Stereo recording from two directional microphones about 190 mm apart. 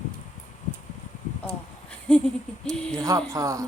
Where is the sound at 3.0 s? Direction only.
15° right (ahead or behind).